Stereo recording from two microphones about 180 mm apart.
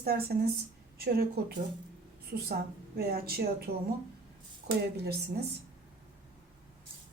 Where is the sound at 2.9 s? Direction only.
60° right (ahead or behind).